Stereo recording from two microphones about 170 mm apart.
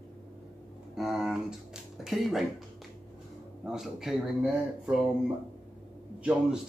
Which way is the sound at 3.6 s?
5° right (ahead or behind).